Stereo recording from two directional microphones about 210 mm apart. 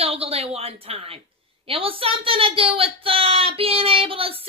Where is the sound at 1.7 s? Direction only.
25° right (ahead or behind).